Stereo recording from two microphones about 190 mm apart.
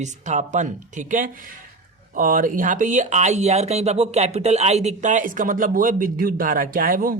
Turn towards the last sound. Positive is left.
turn(degrees=-45)  # may be behind; listen again after turning